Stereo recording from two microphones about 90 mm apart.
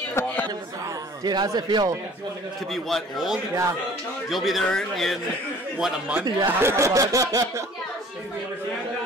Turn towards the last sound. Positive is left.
turn(degrees=-40)  # may be behind; listen again after turning